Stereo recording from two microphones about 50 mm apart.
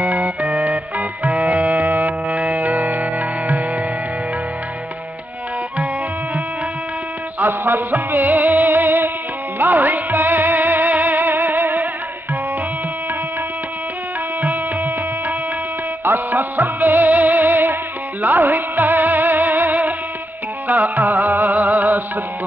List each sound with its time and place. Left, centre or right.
0.0 s music: right
2.2 s music: centre
7.3 s music: right
14.4 s music: right
16.0 s music: right